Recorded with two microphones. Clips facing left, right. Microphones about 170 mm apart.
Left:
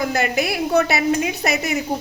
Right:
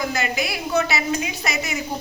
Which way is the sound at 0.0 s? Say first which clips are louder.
Left 4 dB; 55° left (ahead or behind).